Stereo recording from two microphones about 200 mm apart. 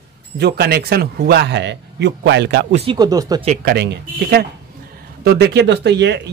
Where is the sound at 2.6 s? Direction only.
30° right (ahead or behind).